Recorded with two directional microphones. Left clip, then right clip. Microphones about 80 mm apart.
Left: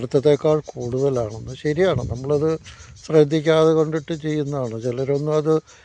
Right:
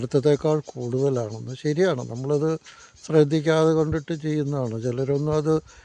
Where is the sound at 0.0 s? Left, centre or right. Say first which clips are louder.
Left 4 dB; right.